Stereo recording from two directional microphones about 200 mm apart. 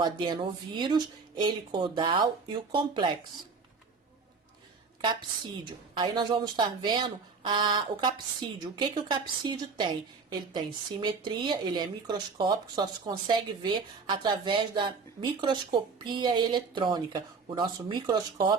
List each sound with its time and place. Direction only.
0.0 s speech: 25° right (ahead or behind)
6.0 s speech: 20° right (ahead or behind)